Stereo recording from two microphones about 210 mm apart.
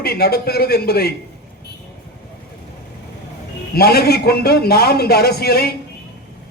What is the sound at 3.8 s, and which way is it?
A man's voice, 50° left (ahead or behind).